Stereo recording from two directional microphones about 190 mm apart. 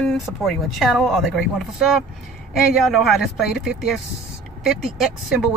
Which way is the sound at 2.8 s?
Centre (ahead or behind).